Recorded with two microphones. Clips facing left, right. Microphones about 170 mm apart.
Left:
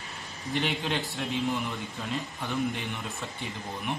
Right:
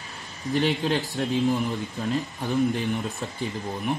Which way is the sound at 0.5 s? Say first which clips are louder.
Right 6 dB; 40° right (ahead or behind).